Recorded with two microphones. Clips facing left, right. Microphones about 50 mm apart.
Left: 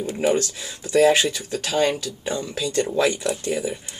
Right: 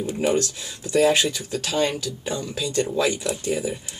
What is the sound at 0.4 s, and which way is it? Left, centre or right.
Speech, left.